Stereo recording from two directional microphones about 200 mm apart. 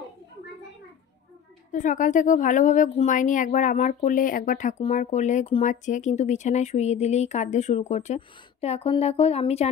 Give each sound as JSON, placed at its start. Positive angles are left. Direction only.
{"t": 1.7, "sound": "a woman's voice", "side_deg": 40}